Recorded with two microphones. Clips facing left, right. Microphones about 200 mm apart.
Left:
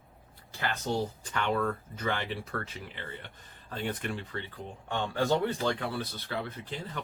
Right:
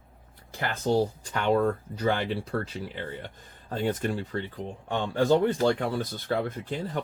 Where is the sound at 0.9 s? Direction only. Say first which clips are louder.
Right 10 dB; 35° right (ahead or behind).